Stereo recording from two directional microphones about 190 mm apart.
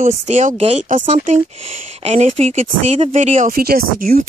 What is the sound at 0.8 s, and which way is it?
Speech, 45° right (ahead or behind).